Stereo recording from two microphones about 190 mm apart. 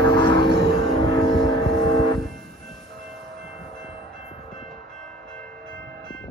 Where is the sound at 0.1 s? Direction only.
25° left (ahead or behind).